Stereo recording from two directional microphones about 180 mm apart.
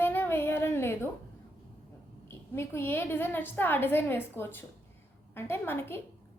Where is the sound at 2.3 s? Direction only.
15° left (ahead or behind).